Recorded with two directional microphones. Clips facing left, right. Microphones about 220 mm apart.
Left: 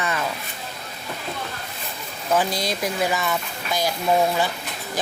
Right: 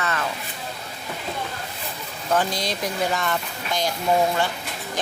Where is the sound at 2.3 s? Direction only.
10° left (ahead or behind).